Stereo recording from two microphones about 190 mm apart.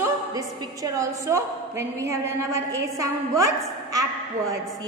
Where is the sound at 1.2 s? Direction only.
15° right (ahead or behind).